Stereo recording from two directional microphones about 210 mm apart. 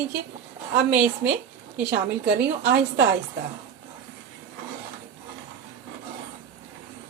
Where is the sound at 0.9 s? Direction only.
10° right (ahead or behind).